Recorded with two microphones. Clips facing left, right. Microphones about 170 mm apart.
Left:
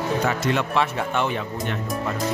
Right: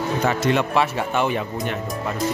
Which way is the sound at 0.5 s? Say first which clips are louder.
Right 2 dB; 10° right (ahead or behind).